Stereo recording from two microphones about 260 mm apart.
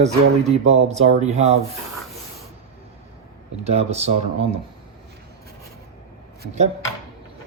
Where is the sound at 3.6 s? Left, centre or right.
Right.